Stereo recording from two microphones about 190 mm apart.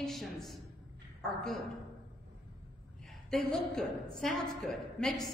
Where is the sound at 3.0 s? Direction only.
5° left (ahead or behind).